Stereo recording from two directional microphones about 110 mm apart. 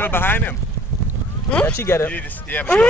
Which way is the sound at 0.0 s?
20° left (ahead or behind).